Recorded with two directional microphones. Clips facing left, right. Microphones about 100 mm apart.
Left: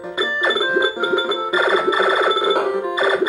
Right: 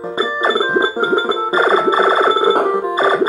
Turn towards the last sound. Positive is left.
turn(degrees=-35)  # may be behind; listen again after turning